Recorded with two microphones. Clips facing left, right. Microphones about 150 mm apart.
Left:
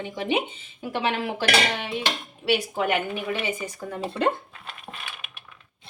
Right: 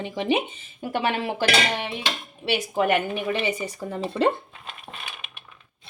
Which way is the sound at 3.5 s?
30° right (ahead or behind).